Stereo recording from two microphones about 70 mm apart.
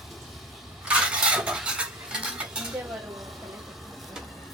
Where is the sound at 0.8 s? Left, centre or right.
Centre.